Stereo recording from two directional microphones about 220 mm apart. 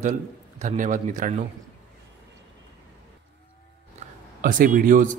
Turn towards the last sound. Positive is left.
turn(degrees=-40)  # may be behind; listen again after turning